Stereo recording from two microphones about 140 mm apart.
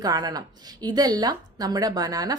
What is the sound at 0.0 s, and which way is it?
A woman's voice, 30° right (ahead or behind).